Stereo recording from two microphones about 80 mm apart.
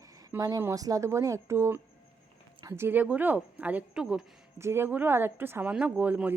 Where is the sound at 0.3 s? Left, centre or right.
Right; by 4.3 s centre.